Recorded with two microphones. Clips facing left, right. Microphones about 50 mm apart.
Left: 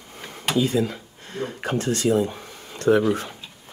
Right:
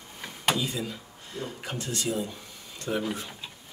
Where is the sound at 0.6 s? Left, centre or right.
Left.